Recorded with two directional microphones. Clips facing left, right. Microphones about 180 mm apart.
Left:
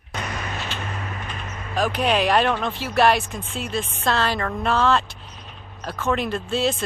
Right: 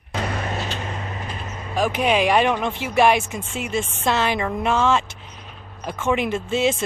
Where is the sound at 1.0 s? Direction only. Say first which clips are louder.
Right 1 dB; 30° right (ahead or behind).